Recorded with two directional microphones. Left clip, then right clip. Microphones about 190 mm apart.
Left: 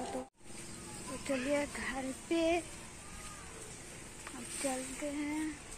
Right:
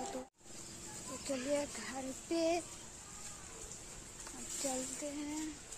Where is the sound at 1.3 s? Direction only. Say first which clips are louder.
Left 3 dB; 5° right (ahead or behind).